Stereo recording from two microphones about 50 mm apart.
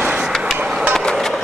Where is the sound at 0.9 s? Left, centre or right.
Centre.